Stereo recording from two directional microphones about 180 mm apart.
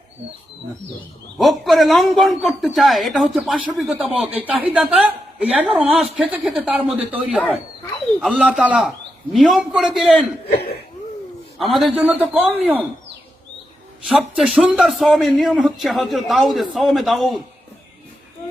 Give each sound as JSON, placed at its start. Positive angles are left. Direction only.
{"t": 1.4, "sound": "a man's voice", "side_deg": 0}
{"t": 11.5, "sound": "a man's voice", "side_deg": 0}
{"t": 14.1, "sound": "a man's voice", "side_deg": -5}